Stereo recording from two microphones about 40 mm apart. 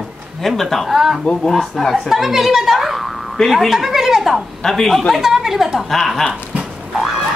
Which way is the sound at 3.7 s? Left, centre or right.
Centre.